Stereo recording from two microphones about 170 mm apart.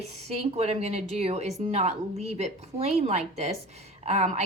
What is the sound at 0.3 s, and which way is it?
Speech, 40° right (ahead or behind).